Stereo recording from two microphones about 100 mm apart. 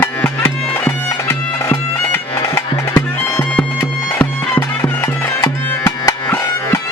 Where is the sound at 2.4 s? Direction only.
35° left (ahead or behind).